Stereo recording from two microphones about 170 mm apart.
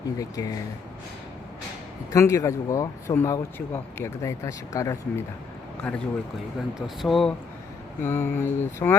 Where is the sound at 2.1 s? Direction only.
20° left (ahead or behind).